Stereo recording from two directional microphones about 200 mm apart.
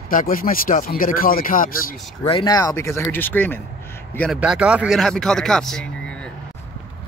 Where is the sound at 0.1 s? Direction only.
45° left (ahead or behind).